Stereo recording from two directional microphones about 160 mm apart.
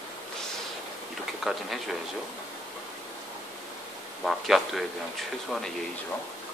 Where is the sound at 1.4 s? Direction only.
Centre (ahead or behind).